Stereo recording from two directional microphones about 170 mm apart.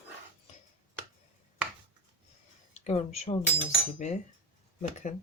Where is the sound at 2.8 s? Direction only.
40° left (ahead or behind).